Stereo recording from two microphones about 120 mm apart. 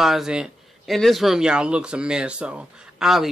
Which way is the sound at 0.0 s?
5° right (ahead or behind).